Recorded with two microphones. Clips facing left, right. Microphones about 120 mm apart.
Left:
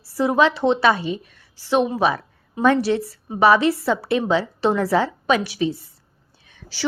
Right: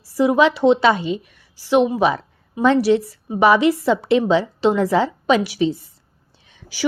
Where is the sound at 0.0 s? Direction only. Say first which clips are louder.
Right 3 dB; 15° right (ahead or behind).